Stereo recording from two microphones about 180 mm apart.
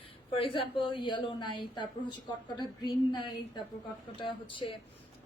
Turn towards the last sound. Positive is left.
turn(degrees=30)  # may be behind; listen again after turning